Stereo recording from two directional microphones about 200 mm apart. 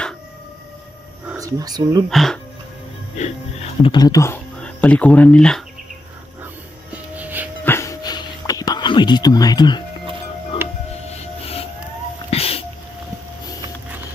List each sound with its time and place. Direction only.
1.3 s speech: 15° right (ahead or behind)
2.0 s speech: centre (ahead or behind)
3.2 s speech: 30° left (ahead or behind); by 5.6 s 5° left (ahead or behind)
6.4 s music: 10° right (ahead or behind)
7.6 s a sound: 15° left (ahead or behind)
10.6 s music: 10° right (ahead or behind)
12.3 s a sound: 30° left (ahead or behind)